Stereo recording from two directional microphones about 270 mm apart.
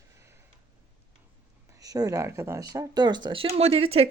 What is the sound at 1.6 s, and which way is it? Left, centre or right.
Speech, centre.